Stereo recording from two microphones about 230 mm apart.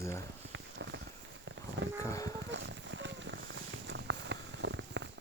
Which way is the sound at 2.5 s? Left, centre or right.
Right.